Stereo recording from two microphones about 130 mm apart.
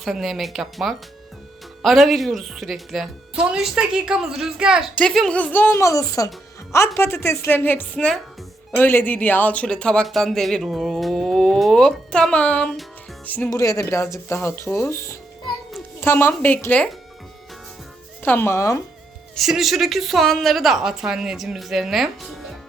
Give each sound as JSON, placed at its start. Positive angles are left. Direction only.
{"t": 0.0, "sound": "speech", "side_deg": 0}
{"t": 13.5, "sound": "speech", "side_deg": 25}
{"t": 18.2, "sound": "speech", "side_deg": 15}
{"t": 19.4, "sound": "speech", "side_deg": 0}